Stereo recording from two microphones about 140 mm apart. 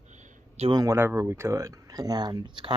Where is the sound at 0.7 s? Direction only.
25° right (ahead or behind).